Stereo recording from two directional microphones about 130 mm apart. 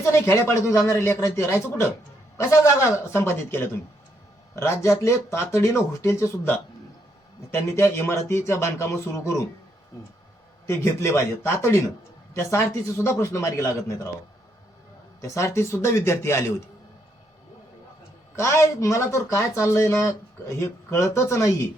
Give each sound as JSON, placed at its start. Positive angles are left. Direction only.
{"t": 0.0, "sound": "speech", "side_deg": 20}
{"t": 10.7, "sound": "speech", "side_deg": 20}
{"t": 12.3, "sound": "speech", "side_deg": 20}
{"t": 15.4, "sound": "speech", "side_deg": 20}
{"t": 18.3, "sound": "speech", "side_deg": 20}